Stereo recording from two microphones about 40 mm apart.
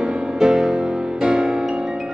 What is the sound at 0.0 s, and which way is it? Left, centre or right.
Music, right.